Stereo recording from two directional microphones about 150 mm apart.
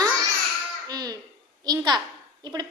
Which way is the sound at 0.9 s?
25° right (ahead or behind).